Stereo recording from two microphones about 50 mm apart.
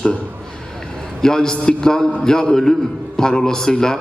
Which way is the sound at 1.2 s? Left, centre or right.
Centre.